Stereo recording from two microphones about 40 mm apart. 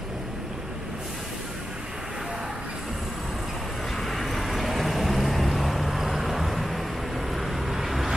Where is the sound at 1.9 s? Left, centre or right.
Centre.